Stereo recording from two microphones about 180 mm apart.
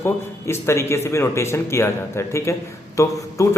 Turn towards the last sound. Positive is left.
turn(degrees=15)  # may be behind; listen again after turning